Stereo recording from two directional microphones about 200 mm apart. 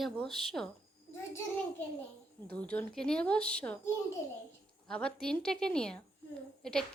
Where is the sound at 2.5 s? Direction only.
5° left (ahead or behind).